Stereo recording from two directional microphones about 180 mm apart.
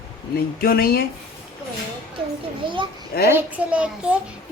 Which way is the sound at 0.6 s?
55° left (ahead or behind).